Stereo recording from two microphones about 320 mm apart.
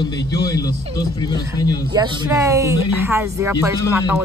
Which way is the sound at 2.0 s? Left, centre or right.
Centre.